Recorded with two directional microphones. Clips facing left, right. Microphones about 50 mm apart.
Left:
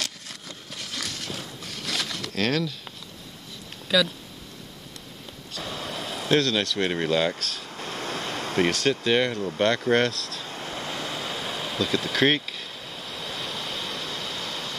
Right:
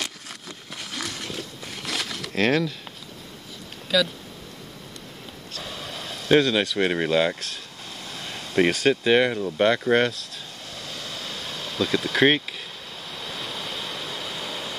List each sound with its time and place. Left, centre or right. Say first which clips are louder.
0.0 s a sound: right 1 dB; centre
3.9 s speech: even; centre
5.5 s vehicle: left 3 dB; centre
6.3 s speech: right 4 dB; centre
7.8 s a sound: left 8 dB; left
8.5 s speech: right 4 dB; centre
10.5 s waves: left 7 dB; left; by 11.8 s centre
11.8 s waves: right 3 dB; centre